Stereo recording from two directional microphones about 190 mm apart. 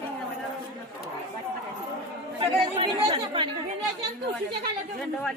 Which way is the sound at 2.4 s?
30° right (ahead or behind).